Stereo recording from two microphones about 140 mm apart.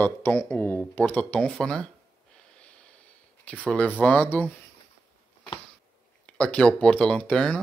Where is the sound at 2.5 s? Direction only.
10° left (ahead or behind).